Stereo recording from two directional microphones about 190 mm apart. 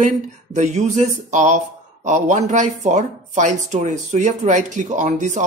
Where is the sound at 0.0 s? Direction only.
40° right (ahead or behind).